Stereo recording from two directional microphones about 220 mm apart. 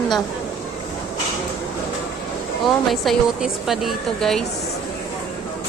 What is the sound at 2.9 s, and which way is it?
A woman's voice, centre (ahead or behind).